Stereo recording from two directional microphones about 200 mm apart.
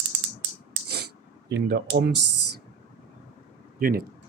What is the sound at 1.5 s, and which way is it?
Speech, 55° right (ahead or behind).